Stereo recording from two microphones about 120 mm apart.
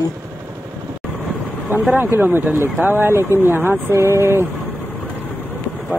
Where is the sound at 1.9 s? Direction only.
15° right (ahead or behind).